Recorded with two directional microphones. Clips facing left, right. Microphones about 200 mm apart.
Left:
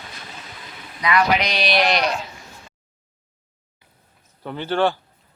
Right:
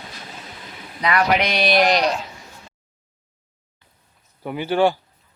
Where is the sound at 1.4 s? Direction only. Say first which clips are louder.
Right 3 dB; 50° right (ahead or behind).